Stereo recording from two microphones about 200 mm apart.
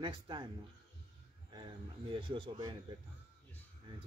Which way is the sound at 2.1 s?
25° right (ahead or behind).